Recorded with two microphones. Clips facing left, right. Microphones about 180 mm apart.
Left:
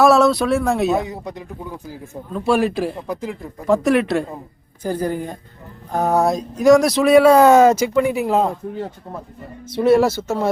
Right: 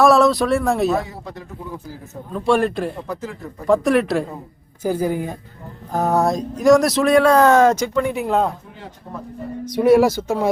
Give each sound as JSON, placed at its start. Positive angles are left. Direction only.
{"t": 0.0, "sound": "speech", "side_deg": 0}
{"t": 0.9, "sound": "speech", "side_deg": 20}
{"t": 2.3, "sound": "speech", "side_deg": 5}
{"t": 3.7, "sound": "speech", "side_deg": 0}
{"t": 9.6, "sound": "speech", "side_deg": -15}